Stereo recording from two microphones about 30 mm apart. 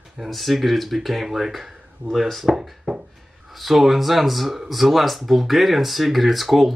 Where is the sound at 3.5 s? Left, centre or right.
Centre.